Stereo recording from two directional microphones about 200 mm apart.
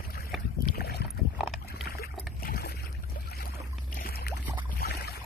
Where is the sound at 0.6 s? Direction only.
50° left (ahead or behind).